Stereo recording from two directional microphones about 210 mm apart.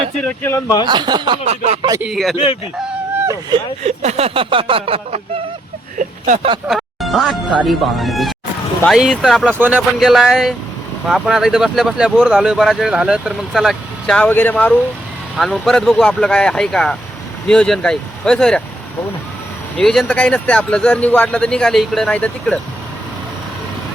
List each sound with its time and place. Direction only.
0.2 s speech: 10° left (ahead or behind)
0.9 s a sound: 20° right (ahead or behind)
1.9 s speech: 5° right (ahead or behind)
2.3 s speech: 25° left (ahead or behind)
3.2 s vehicle: 15° right (ahead or behind)
3.8 s a sound: 30° right (ahead or behind)
6.0 s vehicle: 35° right (ahead or behind)
6.7 s music: centre (ahead or behind)
7.7 s speech: centre (ahead or behind)
19.8 s speech: centre (ahead or behind)